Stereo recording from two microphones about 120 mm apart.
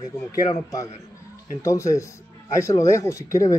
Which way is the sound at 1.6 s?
25° left (ahead or behind).